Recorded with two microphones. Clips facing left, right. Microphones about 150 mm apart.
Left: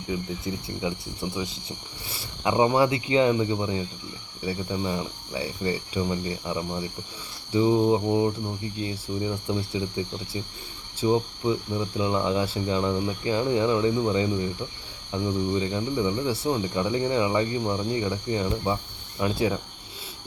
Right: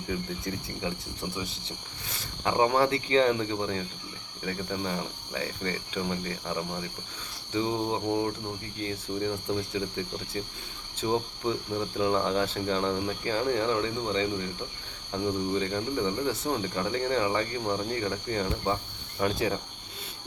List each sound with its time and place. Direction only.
0.5 s speech: 10° left (ahead or behind)